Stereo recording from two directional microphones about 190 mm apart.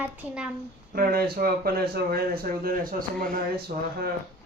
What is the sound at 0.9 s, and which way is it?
Speech, 50° right (ahead or behind).